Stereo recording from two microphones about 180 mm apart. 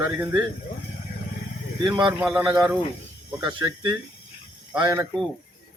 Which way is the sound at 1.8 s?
25° right (ahead or behind).